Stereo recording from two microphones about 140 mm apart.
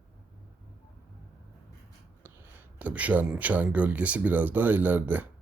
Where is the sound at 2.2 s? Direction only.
10° right (ahead or behind).